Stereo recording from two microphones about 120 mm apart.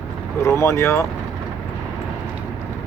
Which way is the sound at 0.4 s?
20° left (ahead or behind).